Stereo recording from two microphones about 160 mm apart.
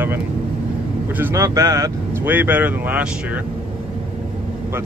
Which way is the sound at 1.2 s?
15° right (ahead or behind).